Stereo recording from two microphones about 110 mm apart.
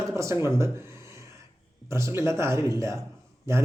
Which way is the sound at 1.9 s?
25° right (ahead or behind).